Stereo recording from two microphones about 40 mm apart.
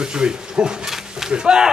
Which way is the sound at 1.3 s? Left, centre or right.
Centre.